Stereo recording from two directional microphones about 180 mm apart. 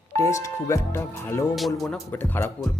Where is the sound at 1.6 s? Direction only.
Centre (ahead or behind).